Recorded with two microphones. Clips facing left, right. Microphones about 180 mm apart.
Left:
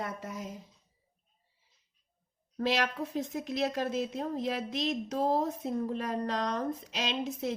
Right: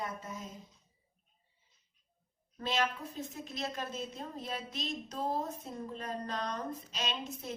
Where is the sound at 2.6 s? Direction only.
75° left (ahead or behind).